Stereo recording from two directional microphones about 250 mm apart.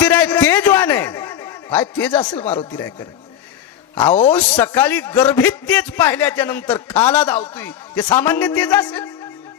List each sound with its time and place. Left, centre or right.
0.0 s a sound: centre
2.3 s speech: left
4.1 s speech: left
4.4 s a man's voice: centre